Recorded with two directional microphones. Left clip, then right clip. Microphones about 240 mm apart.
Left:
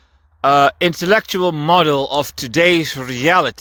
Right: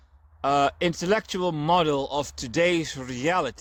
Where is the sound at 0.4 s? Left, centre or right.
Left.